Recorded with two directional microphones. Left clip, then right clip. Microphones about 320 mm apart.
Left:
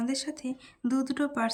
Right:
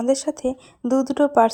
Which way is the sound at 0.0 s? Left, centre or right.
Centre.